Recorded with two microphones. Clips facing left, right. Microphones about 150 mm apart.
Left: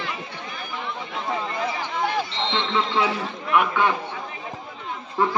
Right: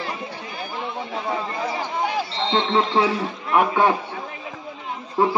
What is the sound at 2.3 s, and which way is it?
A man's voice, 35° right (ahead or behind).